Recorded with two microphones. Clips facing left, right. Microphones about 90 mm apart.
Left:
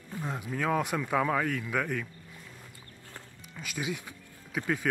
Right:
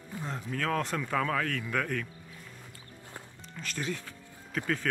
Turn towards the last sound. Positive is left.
turn(degrees=10)  # may be behind; listen again after turning